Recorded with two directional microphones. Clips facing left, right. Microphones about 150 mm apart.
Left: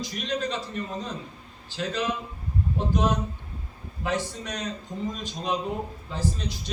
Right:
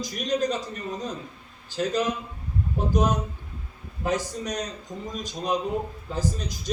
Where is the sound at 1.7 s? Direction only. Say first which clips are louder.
Right 4 dB; 45° right (ahead or behind).